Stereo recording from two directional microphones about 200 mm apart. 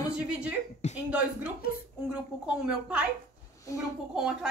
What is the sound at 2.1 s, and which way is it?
Speech, 5° right (ahead or behind).